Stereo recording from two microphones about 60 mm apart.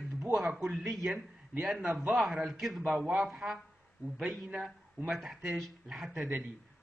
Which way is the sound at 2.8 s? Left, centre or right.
Centre.